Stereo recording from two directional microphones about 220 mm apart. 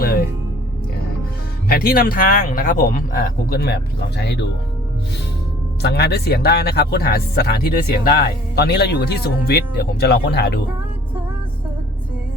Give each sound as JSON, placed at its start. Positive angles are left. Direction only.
{"t": 0.0, "sound": "music", "side_deg": 45}
{"t": 1.6, "sound": "speech", "side_deg": 40}
{"t": 5.8, "sound": "speech", "side_deg": 45}